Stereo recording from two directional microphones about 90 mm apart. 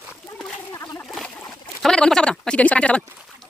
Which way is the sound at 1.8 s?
5° left (ahead or behind).